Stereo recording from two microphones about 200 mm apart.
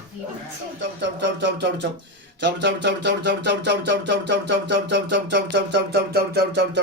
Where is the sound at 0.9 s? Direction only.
60° right (ahead or behind).